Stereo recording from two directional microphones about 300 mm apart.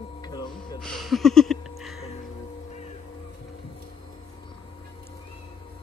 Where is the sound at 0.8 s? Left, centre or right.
Centre.